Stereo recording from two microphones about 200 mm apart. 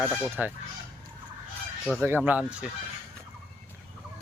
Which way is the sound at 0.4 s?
10° right (ahead or behind).